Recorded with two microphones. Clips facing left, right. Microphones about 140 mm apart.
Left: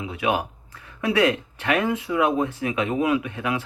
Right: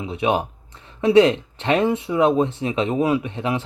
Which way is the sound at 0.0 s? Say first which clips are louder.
Right 3 dB; 25° right (ahead or behind).